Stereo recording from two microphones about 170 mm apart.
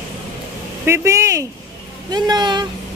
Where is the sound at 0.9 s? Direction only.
15° right (ahead or behind).